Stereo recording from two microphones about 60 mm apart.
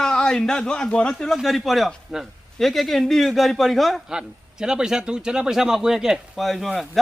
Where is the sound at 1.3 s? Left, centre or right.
Centre.